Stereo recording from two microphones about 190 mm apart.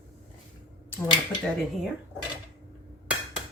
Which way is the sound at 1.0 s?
25° left (ahead or behind).